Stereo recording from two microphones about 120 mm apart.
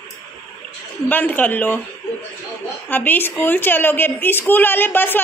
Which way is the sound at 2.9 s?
15° left (ahead or behind).